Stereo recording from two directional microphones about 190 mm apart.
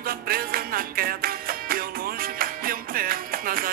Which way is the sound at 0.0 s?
50° right (ahead or behind).